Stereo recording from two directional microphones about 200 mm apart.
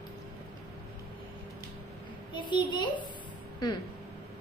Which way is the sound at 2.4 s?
25° left (ahead or behind).